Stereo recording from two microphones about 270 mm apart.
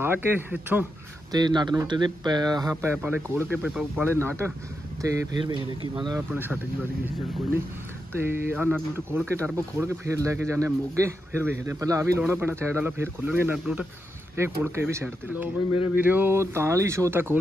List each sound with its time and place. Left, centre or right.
0.0 s speech: centre
8.1 s speech: centre